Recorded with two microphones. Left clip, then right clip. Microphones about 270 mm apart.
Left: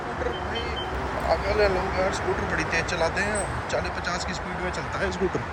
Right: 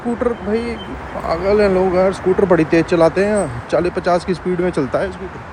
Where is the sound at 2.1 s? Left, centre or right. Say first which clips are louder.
Right 12 dB; centre.